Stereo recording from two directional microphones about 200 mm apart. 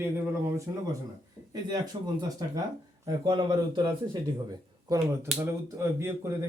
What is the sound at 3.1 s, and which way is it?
A man's voice, 20° right (ahead or behind).